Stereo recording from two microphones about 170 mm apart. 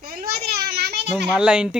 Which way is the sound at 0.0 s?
65° right (ahead or behind).